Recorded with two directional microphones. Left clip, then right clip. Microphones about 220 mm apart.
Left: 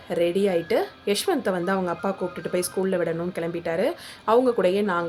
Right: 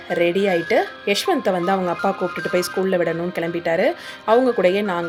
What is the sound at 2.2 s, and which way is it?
Speech, 40° right (ahead or behind).